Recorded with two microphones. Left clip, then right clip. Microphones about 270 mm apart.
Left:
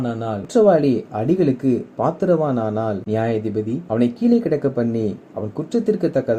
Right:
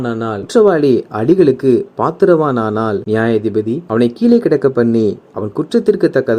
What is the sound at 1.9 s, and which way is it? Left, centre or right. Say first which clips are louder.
Speech: right 4 dB; right.